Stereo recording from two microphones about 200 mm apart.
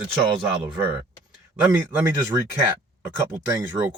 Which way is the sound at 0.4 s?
10° right (ahead or behind).